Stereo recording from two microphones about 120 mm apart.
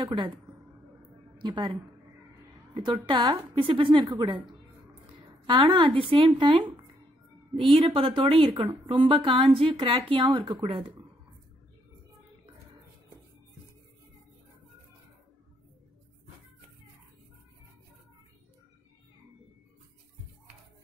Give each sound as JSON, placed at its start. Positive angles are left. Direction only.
{"t": 1.4, "sound": "a woman's voice", "side_deg": -40}
{"t": 2.7, "sound": "a woman's voice", "side_deg": -45}